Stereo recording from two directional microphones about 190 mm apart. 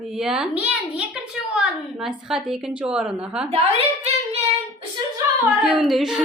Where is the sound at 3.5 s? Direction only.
30° right (ahead or behind).